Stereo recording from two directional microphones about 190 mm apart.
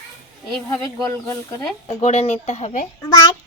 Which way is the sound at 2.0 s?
35° left (ahead or behind).